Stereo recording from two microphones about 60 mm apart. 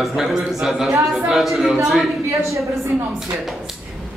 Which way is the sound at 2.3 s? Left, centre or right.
Right.